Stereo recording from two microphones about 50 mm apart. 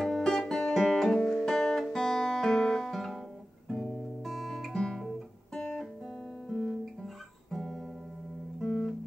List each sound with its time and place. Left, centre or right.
0.0 s music: centre
4.2 s guitar: centre
6.5 s music: centre
8.5 s music: centre